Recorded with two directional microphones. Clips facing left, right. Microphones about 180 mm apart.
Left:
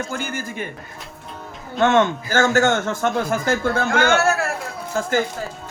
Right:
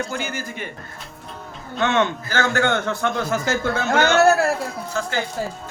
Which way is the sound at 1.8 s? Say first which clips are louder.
Left 4 dB; 50° left (ahead or behind).